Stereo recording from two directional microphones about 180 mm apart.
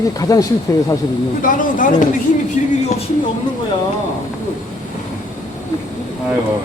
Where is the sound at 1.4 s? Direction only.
50° left (ahead or behind).